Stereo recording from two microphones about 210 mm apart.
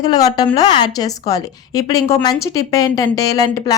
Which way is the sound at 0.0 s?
20° left (ahead or behind).